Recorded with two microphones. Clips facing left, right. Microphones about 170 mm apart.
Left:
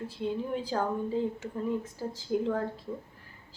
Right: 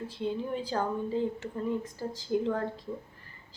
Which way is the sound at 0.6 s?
5° left (ahead or behind).